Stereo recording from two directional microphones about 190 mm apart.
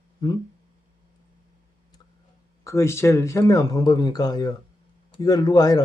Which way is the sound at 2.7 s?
15° left (ahead or behind).